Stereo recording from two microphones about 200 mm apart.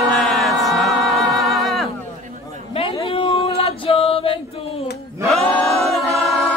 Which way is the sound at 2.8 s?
30° left (ahead or behind).